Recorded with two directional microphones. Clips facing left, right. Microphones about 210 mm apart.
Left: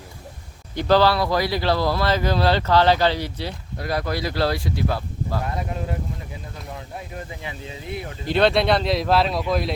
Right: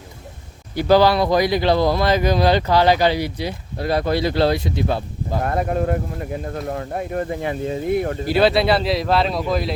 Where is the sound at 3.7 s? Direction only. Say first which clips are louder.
Right 6 dB; 25° right (ahead or behind).